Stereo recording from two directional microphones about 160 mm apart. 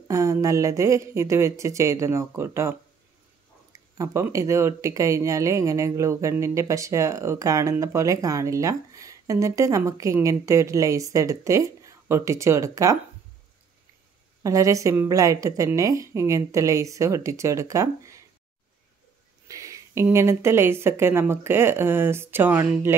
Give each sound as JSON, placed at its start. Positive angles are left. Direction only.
{"t": 0.1, "sound": "speech", "side_deg": -20}
{"t": 3.7, "sound": "speech", "side_deg": -20}
{"t": 14.4, "sound": "speech", "side_deg": -20}
{"t": 19.4, "sound": "speech", "side_deg": -20}